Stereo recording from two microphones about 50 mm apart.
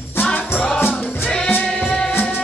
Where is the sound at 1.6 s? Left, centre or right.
Centre.